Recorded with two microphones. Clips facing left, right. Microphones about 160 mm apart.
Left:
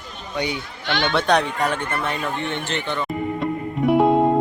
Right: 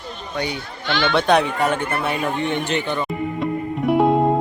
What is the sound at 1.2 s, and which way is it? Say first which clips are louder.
Speech: right 3 dB; centre (ahead or behind).